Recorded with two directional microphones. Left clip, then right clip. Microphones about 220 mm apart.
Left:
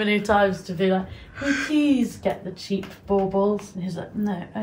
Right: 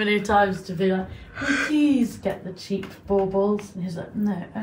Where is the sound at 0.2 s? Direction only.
25° left (ahead or behind).